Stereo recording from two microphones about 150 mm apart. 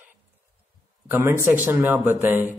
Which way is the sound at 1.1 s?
15° right (ahead or behind).